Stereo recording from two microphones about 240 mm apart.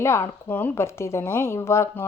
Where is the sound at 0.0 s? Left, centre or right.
Centre.